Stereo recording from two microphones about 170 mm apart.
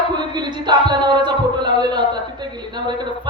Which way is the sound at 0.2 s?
25° right (ahead or behind).